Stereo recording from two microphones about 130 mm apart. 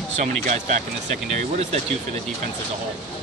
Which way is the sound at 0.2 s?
65° right (ahead or behind).